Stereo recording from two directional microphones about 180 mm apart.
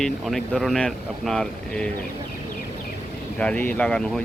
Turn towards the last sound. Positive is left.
turn(degrees=5)  # may be behind; listen again after turning